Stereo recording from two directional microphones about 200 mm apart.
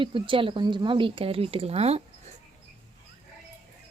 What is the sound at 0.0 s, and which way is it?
Speech, 25° right (ahead or behind).